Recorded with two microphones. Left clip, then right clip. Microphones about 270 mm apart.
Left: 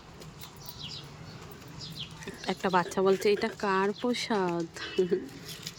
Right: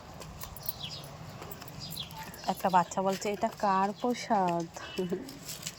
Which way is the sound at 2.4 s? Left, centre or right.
Centre.